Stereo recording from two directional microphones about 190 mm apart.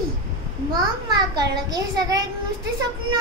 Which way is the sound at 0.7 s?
20° right (ahead or behind).